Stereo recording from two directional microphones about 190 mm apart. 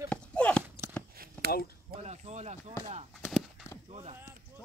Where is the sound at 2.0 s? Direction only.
35° right (ahead or behind).